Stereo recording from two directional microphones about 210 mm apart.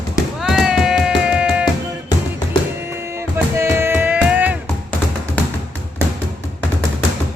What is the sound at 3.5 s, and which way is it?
Music, 10° right (ahead or behind).